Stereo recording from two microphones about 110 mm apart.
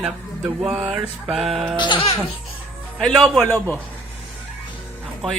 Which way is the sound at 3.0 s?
Centre (ahead or behind).